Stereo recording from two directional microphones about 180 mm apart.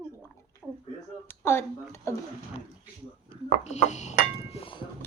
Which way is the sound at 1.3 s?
15° left (ahead or behind).